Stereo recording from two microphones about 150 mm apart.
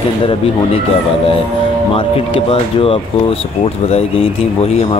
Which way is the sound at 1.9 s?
35° left (ahead or behind).